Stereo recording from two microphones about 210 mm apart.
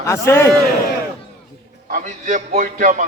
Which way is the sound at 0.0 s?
10° left (ahead or behind).